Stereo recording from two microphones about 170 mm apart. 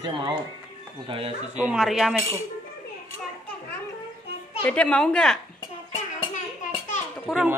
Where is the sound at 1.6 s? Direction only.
5° right (ahead or behind).